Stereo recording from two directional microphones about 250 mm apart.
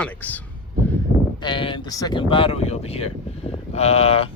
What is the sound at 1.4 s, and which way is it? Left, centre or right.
Speech, centre.